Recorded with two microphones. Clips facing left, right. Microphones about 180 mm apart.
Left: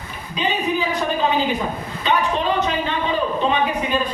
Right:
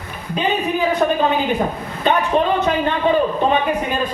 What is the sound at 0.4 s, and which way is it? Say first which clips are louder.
A woman's voice: right 2 dB; 55° right (ahead or behind).